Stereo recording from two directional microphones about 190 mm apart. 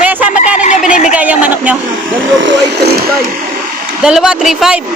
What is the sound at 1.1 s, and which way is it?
Speech, 10° right (ahead or behind).